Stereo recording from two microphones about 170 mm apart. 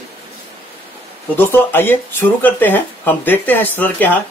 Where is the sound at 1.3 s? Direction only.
10° left (ahead or behind).